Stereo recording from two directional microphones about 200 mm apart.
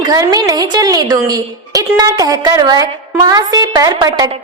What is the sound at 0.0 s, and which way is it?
A woman's voice, 20° right (ahead or behind).